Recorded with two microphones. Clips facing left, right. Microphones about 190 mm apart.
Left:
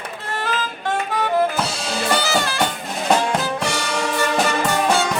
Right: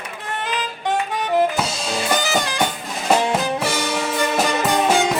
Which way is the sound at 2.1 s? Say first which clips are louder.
Left 1 dB; 15° right (ahead or behind).